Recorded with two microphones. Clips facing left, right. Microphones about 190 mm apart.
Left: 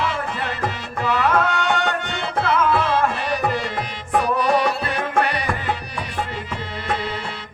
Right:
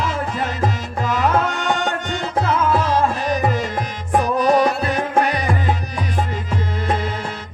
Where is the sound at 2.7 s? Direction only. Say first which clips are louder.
Right 2 dB; 45° right (ahead or behind).